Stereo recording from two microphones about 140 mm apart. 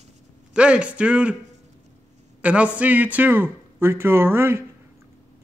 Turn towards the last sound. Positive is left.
turn(degrees=-15)  # may be behind; listen again after turning